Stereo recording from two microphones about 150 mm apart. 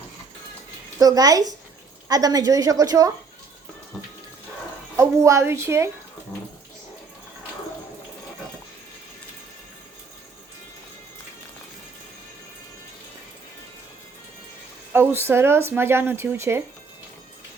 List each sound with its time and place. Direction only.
0.9 s a woman's voice: 25° right (ahead or behind)
4.9 s a woman's voice: 20° right (ahead or behind)
14.9 s speech: 15° right (ahead or behind)